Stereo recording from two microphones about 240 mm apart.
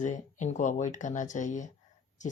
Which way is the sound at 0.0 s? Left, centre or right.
Left.